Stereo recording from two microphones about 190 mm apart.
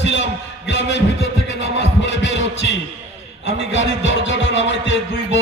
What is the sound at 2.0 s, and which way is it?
Heart sounds, 70° left (ahead or behind).